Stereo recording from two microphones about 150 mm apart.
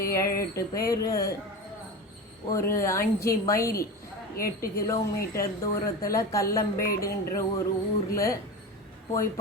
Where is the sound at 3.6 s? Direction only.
75° left (ahead or behind).